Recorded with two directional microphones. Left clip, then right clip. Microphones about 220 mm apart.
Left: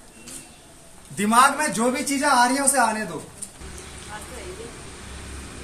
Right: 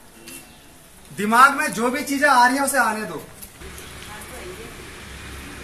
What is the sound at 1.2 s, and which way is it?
A woman's voice, 50° left (ahead or behind).